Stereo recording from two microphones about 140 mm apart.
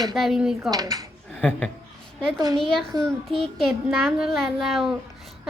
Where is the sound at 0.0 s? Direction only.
Centre (ahead or behind).